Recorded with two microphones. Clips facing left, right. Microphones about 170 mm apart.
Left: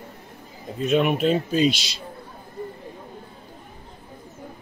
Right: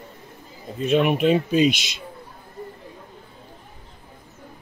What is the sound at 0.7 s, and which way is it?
Speech, centre (ahead or behind).